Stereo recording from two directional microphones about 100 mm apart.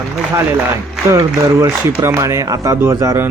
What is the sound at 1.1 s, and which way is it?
Speech, 30° right (ahead or behind).